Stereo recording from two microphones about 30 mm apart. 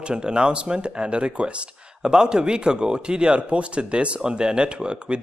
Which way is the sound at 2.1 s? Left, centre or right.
Right.